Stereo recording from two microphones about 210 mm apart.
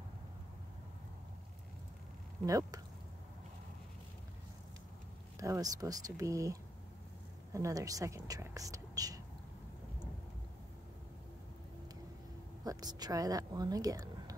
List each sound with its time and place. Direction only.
2.4 s speech: 15° right (ahead or behind)
5.4 s speech: 15° right (ahead or behind)
12.6 s speech: 20° right (ahead or behind)